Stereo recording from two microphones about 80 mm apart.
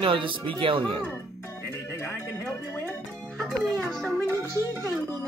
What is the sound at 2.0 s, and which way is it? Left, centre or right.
Music, left.